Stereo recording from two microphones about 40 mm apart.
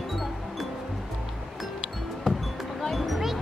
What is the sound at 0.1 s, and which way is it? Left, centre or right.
Music, centre.